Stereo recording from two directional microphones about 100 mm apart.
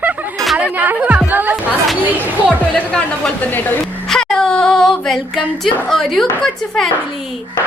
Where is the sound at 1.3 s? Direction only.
20° right (ahead or behind).